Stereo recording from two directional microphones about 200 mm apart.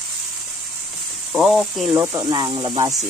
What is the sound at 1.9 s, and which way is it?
Speech, 15° right (ahead or behind).